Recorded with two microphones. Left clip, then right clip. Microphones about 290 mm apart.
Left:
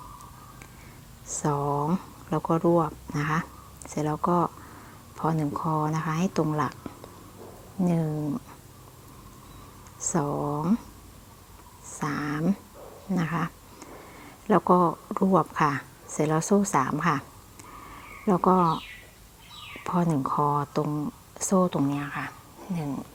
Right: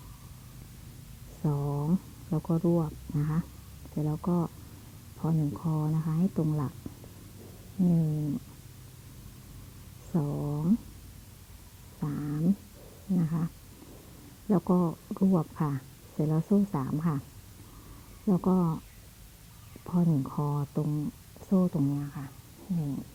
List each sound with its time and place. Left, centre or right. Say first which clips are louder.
1.4 s speech: left 8 dB; centre
7.8 s speech: left 3 dB; left
10.1 s speech: left 7 dB; centre
11.9 s speech: left 7 dB; centre
14.5 s speech: left 8 dB; centre
18.3 s speech: left 9 dB; centre
19.8 s speech: left 5 dB; centre